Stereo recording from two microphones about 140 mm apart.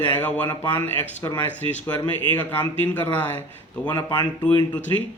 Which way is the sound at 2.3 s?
10° left (ahead or behind).